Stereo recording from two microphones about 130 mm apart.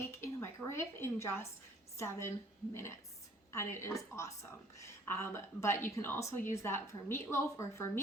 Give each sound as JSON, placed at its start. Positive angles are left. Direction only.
{"t": 0.1, "sound": "a sound", "side_deg": 20}
{"t": 2.0, "sound": "a woman's voice", "side_deg": 20}
{"t": 3.5, "sound": "a woman's voice", "side_deg": 20}